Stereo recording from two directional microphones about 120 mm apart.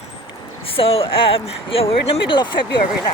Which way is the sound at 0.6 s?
50° left (ahead or behind).